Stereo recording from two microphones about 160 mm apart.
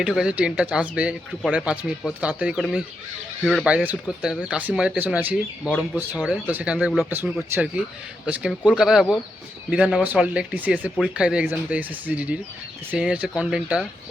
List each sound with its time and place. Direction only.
0.0 s speech: 5° right (ahead or behind)
7.5 s speech: 15° right (ahead or behind)